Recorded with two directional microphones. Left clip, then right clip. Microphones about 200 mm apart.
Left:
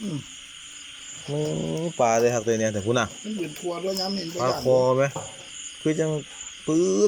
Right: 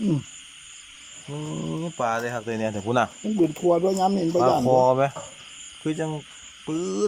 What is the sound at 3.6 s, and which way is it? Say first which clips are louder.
Speech: right 7 dB; 40° right (ahead or behind).